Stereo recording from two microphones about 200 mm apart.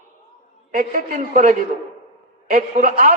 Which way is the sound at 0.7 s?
45° right (ahead or behind).